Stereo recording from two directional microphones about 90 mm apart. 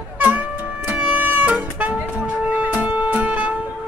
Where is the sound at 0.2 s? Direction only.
20° right (ahead or behind).